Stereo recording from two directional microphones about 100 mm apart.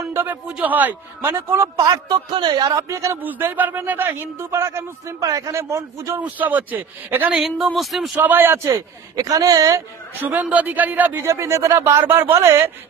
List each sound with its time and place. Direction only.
0.1 s speech: 20° right (ahead or behind)
1.9 s a man's voice: 45° right (ahead or behind)
3.2 s speech: 20° right (ahead or behind)
6.1 s speech: 15° right (ahead or behind)
7.4 s speech: centre (ahead or behind)
8.2 s speech: 20° right (ahead or behind)
8.7 s speech: 35° right (ahead or behind)
10.1 s speech: 15° right (ahead or behind)
11.2 s speech: 30° right (ahead or behind)